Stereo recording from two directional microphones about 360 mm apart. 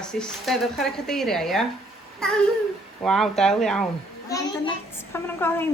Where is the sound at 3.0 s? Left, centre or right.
Centre.